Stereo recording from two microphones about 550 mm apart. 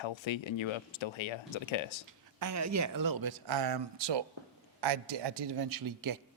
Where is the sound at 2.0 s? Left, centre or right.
Right.